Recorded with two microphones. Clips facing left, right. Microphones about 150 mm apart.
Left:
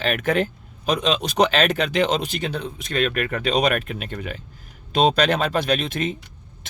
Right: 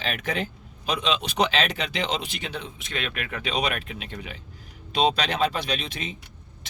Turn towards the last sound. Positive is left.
turn(degrees=50)  # may be behind; listen again after turning